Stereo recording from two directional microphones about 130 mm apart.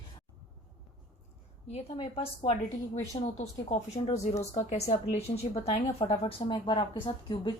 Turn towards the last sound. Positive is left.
turn(degrees=40)  # may be behind; listen again after turning